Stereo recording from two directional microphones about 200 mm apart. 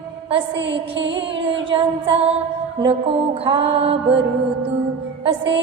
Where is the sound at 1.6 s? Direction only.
25° right (ahead or behind).